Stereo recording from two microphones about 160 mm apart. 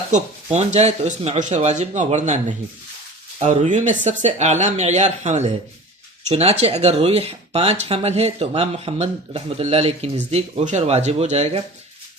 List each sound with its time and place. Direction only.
0.1 s speech: 45° right (ahead or behind)